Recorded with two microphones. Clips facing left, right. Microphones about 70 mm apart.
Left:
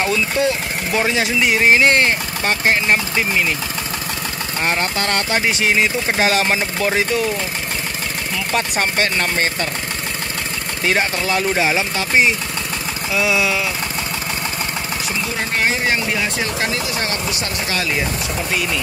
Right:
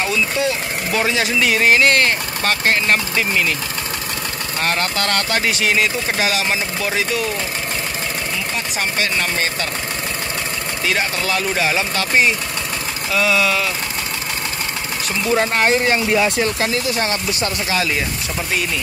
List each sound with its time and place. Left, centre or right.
0.0 s speech: left
4.6 s speech: left
8.5 s speech: left
10.9 s speech: left